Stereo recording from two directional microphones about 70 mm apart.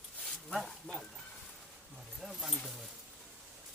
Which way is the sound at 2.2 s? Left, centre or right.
Centre.